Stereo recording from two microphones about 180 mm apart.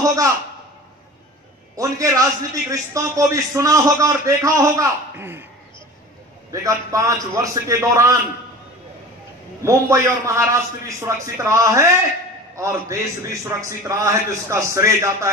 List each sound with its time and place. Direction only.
0.0 s a man's voice: 20° right (ahead or behind)
1.8 s a man's voice: 20° right (ahead or behind)
6.5 s a man's voice: 20° right (ahead or behind)
9.6 s a man's voice: 15° right (ahead or behind)